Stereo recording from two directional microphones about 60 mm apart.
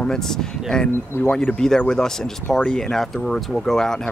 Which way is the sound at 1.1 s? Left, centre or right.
Left.